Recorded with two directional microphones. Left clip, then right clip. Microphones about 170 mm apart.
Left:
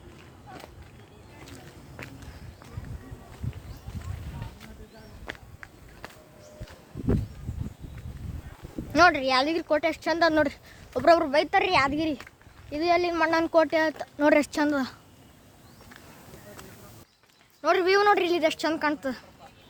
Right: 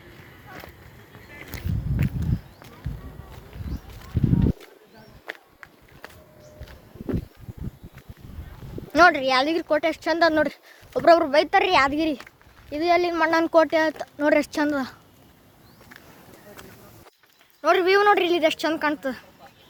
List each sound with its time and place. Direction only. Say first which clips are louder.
5.2 s a sound: right 3 dB; 45° right (ahead or behind)
6.0 s a sound: right 1 dB; 25° right (ahead or behind)
8.9 s speech: right 3 dB; 10° right (ahead or behind)
13.3 s speech: right 4 dB; 20° right (ahead or behind)
14.2 s speech: right 1 dB; 5° left (ahead or behind)
17.6 s speech: right 3 dB; 10° right (ahead or behind)